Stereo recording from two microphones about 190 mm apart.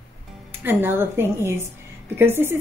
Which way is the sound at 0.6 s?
10° right (ahead or behind).